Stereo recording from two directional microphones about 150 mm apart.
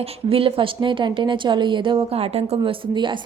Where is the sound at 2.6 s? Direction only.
30° right (ahead or behind).